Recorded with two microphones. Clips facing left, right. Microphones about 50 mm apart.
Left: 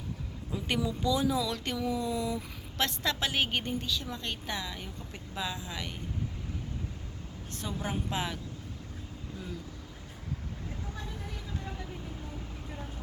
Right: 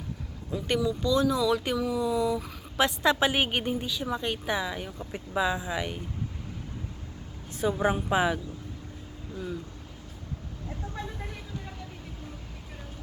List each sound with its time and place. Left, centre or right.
0.8 s speech: centre
1.4 s speech: centre
2.7 s a woman's voice: centre
7.7 s a woman's voice: right